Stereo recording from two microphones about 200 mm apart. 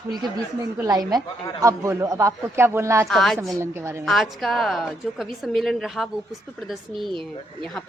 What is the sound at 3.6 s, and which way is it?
Speech, 15° right (ahead or behind).